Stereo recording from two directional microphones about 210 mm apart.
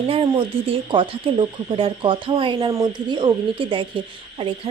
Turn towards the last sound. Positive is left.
turn(degrees=-25)  # may be behind; listen again after turning